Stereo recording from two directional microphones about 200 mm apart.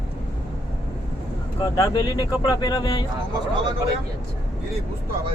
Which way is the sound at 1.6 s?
20° left (ahead or behind).